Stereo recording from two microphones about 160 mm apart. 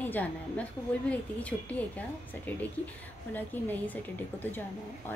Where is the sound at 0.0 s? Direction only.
10° left (ahead or behind).